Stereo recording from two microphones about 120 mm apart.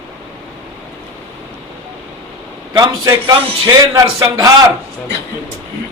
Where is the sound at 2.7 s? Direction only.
35° right (ahead or behind).